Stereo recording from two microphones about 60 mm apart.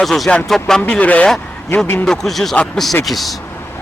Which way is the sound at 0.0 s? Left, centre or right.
Centre.